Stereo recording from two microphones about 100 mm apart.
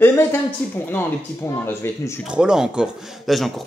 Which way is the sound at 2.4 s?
10° right (ahead or behind).